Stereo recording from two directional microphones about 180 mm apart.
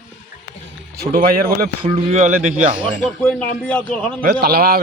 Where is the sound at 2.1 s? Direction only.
40° right (ahead or behind).